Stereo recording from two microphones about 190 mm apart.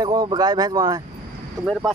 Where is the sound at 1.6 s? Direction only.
5° right (ahead or behind).